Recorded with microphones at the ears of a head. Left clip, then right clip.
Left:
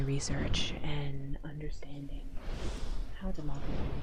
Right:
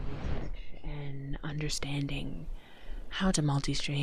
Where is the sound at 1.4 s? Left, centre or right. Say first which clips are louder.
Right 9 dB; right.